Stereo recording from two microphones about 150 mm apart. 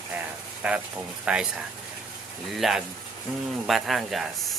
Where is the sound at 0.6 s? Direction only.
10° right (ahead or behind).